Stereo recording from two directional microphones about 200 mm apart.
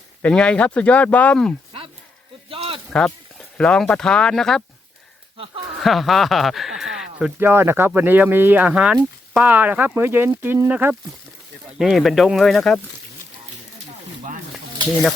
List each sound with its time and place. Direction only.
0.2 s speech: 5° left (ahead or behind)
2.5 s a sound: 30° right (ahead or behind)
2.9 s speech: 5° left (ahead or behind)
5.8 s speech: centre (ahead or behind)